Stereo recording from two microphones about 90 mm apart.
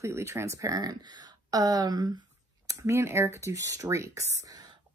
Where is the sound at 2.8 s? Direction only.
30° right (ahead or behind).